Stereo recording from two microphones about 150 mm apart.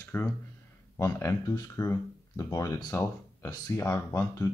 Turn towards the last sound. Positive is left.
turn(degrees=20)  # may be behind; listen again after turning